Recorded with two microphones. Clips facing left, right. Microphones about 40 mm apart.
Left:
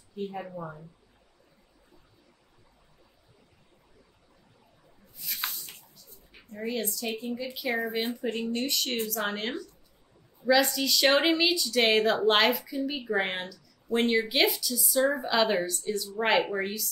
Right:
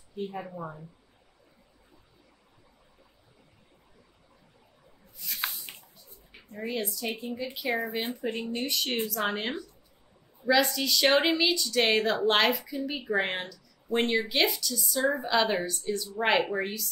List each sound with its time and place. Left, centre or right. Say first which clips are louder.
0.3 s speech: even; centre
5.2 s squish: right 1 dB; centre
6.5 s a woman's voice: left 1 dB; centre
8.2 s a woman's voice: left 2 dB; centre
10.4 s speech: left 1 dB; centre